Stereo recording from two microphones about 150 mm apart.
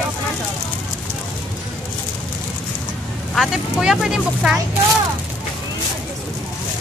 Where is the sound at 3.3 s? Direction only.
Centre (ahead or behind).